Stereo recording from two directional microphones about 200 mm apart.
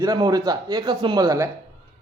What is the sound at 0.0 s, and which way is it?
A man's voice, 20° right (ahead or behind).